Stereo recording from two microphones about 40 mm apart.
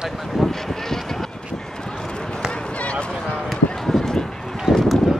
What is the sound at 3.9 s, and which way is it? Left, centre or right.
Run, centre.